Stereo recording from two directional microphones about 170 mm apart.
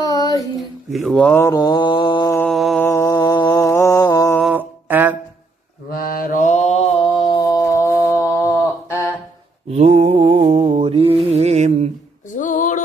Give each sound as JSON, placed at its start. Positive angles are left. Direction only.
{"t": 0.0, "sound": "a sound", "side_deg": 20}
{"t": 0.6, "sound": "mantra", "side_deg": 0}
{"t": 2.4, "sound": "mantra", "side_deg": 0}
{"t": 2.8, "sound": "mantra", "side_deg": 15}
{"t": 4.4, "sound": "music", "side_deg": -5}
{"t": 5.9, "sound": "mantra", "side_deg": 60}
{"t": 9.7, "sound": "mantra", "side_deg": -40}
{"t": 12.4, "sound": "a sound", "side_deg": 50}